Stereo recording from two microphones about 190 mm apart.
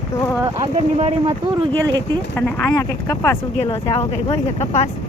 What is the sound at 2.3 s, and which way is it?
Speech, 10° left (ahead or behind).